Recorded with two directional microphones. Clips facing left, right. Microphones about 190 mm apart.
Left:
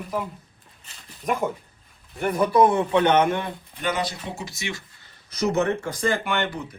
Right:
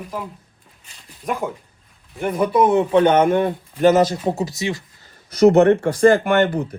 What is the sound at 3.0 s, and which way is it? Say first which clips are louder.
Speech: right 5 dB; 45° right (ahead or behind).